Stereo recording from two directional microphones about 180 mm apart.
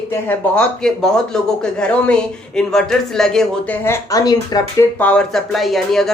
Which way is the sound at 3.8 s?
15° left (ahead or behind).